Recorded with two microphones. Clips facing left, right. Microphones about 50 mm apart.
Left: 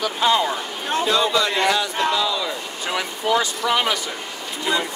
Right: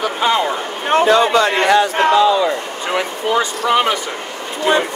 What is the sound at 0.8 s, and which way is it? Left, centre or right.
A man's voice, right.